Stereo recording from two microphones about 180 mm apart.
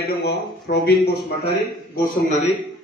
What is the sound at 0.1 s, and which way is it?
Speech, 65° left (ahead or behind).